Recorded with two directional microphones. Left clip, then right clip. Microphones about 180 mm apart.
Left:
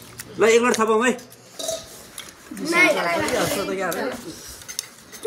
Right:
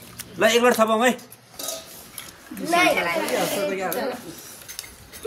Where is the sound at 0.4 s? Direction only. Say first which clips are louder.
Even; 45° right (ahead or behind).